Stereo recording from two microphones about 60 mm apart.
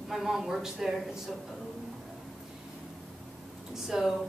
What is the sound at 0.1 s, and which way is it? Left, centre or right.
Speech, centre.